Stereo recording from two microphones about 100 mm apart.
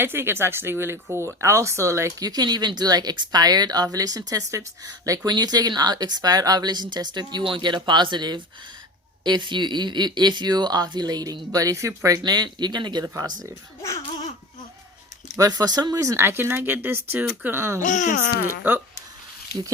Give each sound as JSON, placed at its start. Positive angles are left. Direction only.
{"t": 0.0, "sound": "speech", "side_deg": -25}
{"t": 15.4, "sound": "speech", "side_deg": -40}